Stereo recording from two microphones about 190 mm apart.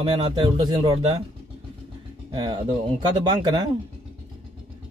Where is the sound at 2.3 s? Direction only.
25° right (ahead or behind).